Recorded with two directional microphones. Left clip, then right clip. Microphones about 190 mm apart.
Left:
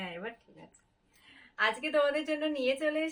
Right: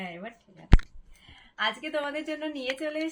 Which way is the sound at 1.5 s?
20° left (ahead or behind).